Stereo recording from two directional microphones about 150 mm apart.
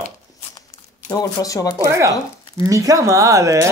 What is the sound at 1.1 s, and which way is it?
Speech, 25° left (ahead or behind).